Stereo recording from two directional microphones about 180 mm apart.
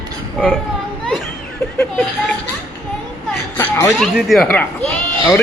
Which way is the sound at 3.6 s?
15° left (ahead or behind).